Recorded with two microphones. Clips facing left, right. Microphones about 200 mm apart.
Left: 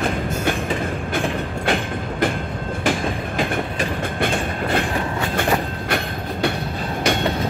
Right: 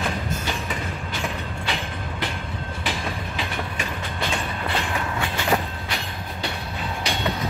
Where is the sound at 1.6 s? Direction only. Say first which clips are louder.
Left 9 dB; 50° left (ahead or behind).